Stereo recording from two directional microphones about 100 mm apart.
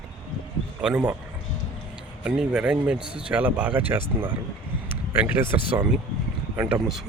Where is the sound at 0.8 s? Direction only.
10° right (ahead or behind).